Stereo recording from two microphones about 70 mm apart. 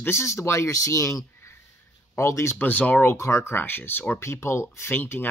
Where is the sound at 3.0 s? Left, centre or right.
Left.